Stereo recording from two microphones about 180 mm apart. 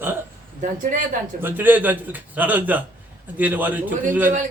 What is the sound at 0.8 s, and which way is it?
Speech, 45° right (ahead or behind).